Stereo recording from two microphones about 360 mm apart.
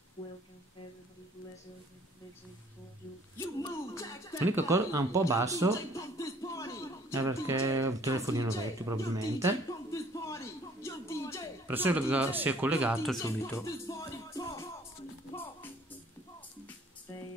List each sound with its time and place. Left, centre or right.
0.2 s music: centre
3.3 s speech: centre
4.5 s speech: centre
5.9 s music: centre
7.2 s speech: centre
9.7 s a sound: centre
11.6 s speech: centre